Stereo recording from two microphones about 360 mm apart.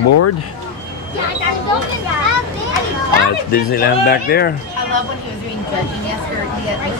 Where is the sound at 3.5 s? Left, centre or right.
Left.